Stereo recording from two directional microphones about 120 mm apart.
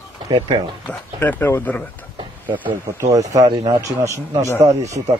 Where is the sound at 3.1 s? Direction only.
30° right (ahead or behind).